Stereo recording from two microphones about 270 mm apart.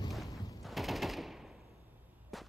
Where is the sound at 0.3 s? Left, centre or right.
Centre.